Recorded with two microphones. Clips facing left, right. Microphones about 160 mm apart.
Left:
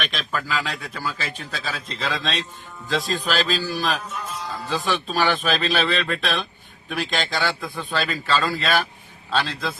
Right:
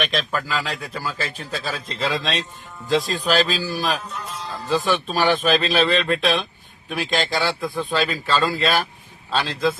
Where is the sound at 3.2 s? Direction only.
40° right (ahead or behind).